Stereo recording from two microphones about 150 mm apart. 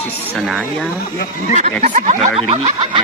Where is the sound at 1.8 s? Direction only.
55° right (ahead or behind).